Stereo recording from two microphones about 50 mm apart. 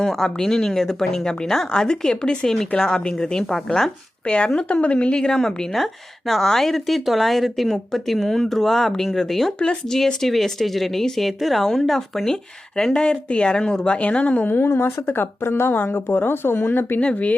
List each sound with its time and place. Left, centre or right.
0.0 s a woman's voice: centre; by 14.4 s left
14.4 s a woman's voice: left
15.0 s speech: left
17.0 s speech: left